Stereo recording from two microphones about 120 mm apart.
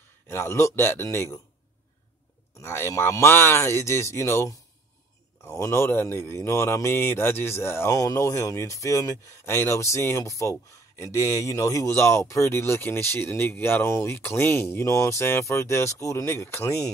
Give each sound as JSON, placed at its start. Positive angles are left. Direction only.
{"t": 0.3, "sound": "speech", "side_deg": 20}
{"t": 2.6, "sound": "speech", "side_deg": 20}